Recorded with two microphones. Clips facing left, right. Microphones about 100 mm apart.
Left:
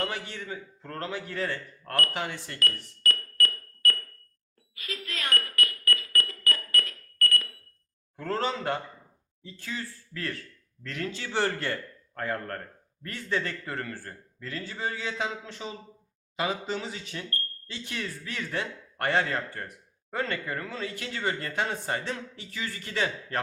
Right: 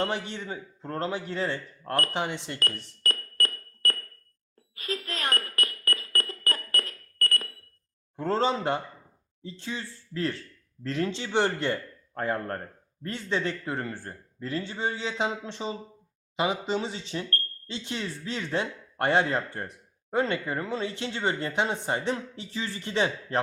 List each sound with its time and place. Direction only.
0.0 s a man's voice: 20° right (ahead or behind)
2.6 s music: 35° right (ahead or behind)
8.1 s a man's voice: 25° right (ahead or behind)